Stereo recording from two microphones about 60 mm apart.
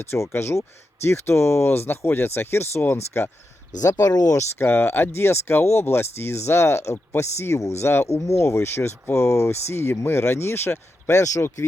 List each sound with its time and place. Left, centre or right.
0.0 s speech: left
3.8 s speech: left
4.5 s speech: left